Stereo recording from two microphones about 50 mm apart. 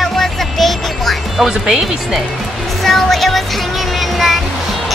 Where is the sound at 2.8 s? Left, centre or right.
Centre.